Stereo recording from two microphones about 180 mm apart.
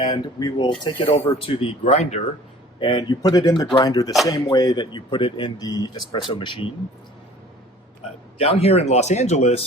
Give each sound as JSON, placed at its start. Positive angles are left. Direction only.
{"t": 0.0, "sound": "speech", "side_deg": 25}
{"t": 2.8, "sound": "speech", "side_deg": 25}
{"t": 8.4, "sound": "speech", "side_deg": 35}